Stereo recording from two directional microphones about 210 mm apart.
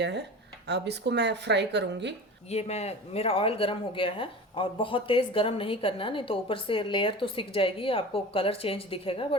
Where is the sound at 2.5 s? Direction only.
30° left (ahead or behind).